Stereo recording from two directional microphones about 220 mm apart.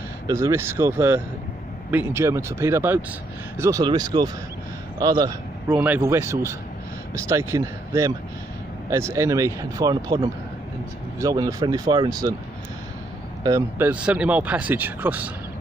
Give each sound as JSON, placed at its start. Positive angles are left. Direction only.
{"t": 0.3, "sound": "a man's voice", "side_deg": -15}
{"t": 5.8, "sound": "speech", "side_deg": -10}
{"t": 13.4, "sound": "speech", "side_deg": -15}